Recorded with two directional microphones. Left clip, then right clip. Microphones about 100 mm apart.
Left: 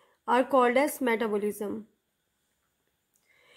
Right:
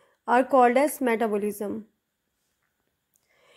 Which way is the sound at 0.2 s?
30° right (ahead or behind).